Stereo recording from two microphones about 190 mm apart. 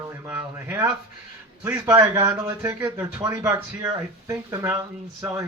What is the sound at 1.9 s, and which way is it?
Speech, 15° right (ahead or behind).